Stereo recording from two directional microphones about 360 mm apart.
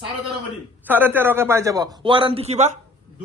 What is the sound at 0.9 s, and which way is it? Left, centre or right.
Speech, centre.